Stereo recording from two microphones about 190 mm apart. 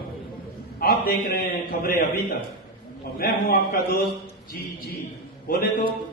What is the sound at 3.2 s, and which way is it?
Speech, 50° left (ahead or behind).